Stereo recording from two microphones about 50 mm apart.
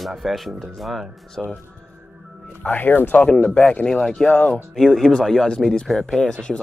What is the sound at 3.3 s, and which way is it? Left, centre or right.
Speech, left.